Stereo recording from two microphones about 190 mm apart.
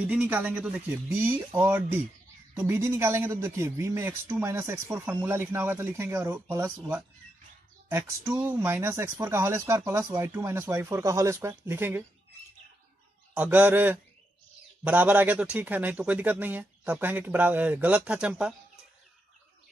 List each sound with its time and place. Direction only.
0.0 s speech: 5° right (ahead or behind)
13.3 s speech: 10° right (ahead or behind)